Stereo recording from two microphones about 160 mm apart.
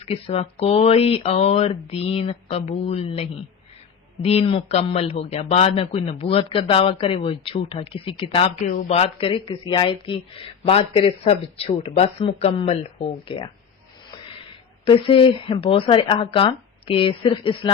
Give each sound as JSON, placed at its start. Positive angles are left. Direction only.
{"t": 0.0, "sound": "speech", "side_deg": 35}
{"t": 8.6, "sound": "speech", "side_deg": 60}
{"t": 8.9, "sound": "speech", "side_deg": 35}
{"t": 14.8, "sound": "speech", "side_deg": 35}